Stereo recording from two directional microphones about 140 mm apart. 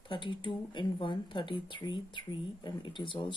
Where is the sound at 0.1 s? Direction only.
35° left (ahead or behind).